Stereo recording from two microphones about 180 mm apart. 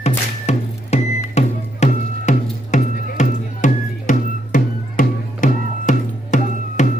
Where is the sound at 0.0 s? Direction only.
35° left (ahead or behind).